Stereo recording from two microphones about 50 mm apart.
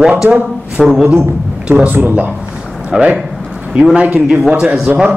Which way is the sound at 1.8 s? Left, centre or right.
Right.